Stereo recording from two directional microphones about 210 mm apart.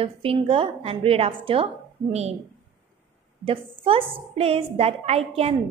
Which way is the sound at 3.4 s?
25° right (ahead or behind).